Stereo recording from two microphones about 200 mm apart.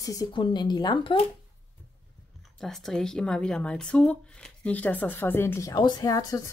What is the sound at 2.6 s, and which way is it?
Speech, centre (ahead or behind).